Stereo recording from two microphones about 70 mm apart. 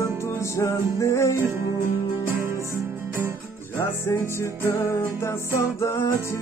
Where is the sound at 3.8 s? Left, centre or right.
Left.